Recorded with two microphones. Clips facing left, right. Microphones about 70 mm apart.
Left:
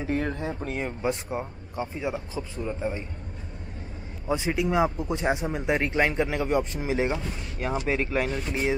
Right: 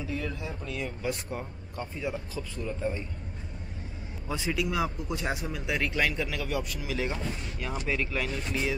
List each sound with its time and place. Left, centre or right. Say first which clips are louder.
0.0 s speech: left 6 dB; left
4.3 s speech: left 5 dB; left